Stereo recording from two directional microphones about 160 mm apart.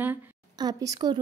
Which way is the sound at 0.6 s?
25° right (ahead or behind).